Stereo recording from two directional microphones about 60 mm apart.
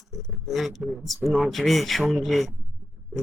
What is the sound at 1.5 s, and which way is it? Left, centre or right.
Speech, centre.